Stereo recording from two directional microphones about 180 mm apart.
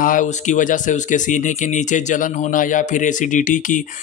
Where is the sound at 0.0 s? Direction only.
45° left (ahead or behind).